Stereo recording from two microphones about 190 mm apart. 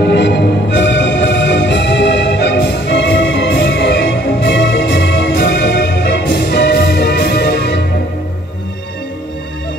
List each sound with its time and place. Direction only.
0.0 s music: 65° left (ahead or behind)